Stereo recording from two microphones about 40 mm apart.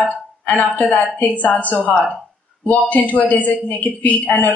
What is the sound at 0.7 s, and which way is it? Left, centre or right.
A woman's voice, left.